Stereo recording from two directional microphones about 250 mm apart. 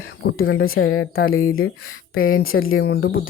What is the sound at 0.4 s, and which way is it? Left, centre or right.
Speech, left.